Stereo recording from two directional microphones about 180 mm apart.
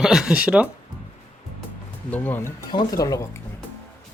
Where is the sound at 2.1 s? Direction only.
10° left (ahead or behind).